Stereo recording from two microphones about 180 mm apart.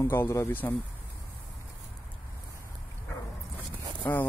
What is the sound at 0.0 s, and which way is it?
Speech, 15° left (ahead or behind).